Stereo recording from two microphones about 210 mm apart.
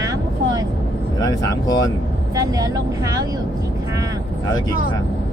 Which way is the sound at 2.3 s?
15° right (ahead or behind).